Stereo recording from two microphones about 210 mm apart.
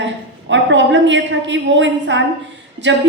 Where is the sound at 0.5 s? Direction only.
60° right (ahead or behind).